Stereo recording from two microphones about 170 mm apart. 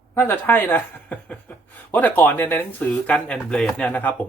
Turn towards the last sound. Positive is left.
turn(degrees=10)  # may be behind; listen again after turning